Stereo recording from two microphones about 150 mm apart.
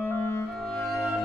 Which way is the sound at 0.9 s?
20° left (ahead or behind).